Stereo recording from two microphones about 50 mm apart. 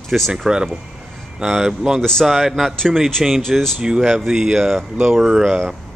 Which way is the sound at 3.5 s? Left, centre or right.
Centre.